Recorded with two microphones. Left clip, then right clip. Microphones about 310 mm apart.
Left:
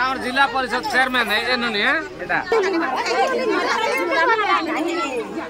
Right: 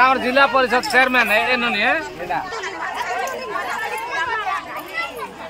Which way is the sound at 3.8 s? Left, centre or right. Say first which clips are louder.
Left 5 dB; left.